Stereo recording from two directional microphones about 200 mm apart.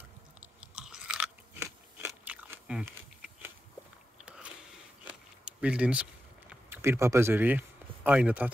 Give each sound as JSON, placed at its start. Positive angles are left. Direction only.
{"t": 0.6, "sound": "chewing", "side_deg": -5}
{"t": 2.0, "sound": "biting", "side_deg": -10}
{"t": 5.0, "sound": "a sound", "side_deg": -5}
{"t": 6.7, "sound": "speech", "side_deg": -15}